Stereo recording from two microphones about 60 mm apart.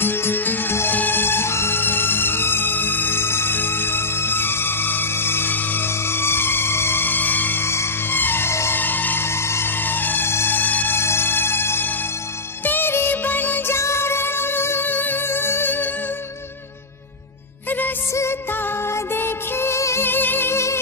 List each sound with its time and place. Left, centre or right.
0.0 s music: left
7.6 s music: left
8.7 s music: left
11.0 s music: left
17.6 s music: left
18.9 s music: left
20.1 s music: left